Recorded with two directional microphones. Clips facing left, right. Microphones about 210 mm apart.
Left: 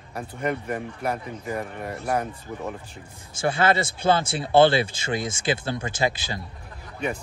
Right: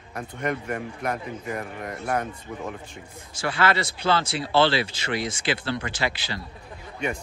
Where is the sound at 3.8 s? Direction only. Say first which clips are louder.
Left 2 dB; 50° left (ahead or behind).